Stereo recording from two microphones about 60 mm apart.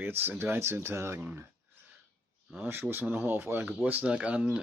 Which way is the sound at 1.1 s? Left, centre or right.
Right.